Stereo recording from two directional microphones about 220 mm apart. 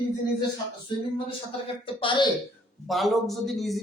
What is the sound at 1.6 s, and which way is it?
Speech, 20° left (ahead or behind).